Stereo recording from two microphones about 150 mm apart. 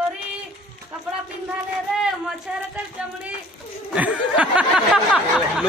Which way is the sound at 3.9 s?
10° right (ahead or behind).